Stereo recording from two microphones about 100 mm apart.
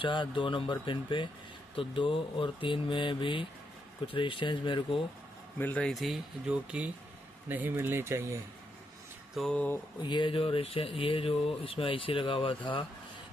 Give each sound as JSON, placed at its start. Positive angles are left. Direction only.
{"t": 0.0, "sound": "speech", "side_deg": 55}
{"t": 5.6, "sound": "speech", "side_deg": 15}
{"t": 5.9, "sound": "speech", "side_deg": 0}
{"t": 9.4, "sound": "speech", "side_deg": 0}
{"t": 10.0, "sound": "speech", "side_deg": 55}